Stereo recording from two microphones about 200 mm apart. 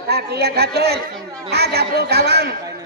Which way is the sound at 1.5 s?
55° right (ahead or behind).